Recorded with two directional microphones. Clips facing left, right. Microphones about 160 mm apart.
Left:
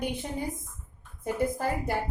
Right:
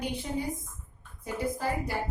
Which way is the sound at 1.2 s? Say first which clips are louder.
Left 4 dB; 55° left (ahead or behind).